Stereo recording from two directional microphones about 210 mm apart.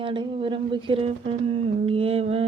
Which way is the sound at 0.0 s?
25° right (ahead or behind).